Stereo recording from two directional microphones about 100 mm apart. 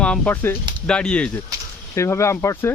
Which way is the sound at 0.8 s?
10° left (ahead or behind).